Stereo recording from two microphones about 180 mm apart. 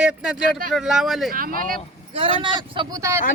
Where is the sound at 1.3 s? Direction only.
50° right (ahead or behind).